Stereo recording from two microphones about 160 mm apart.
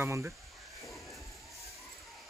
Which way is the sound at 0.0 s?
15° right (ahead or behind).